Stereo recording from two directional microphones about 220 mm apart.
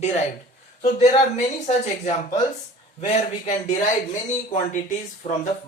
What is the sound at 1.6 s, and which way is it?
Speech, 30° left (ahead or behind).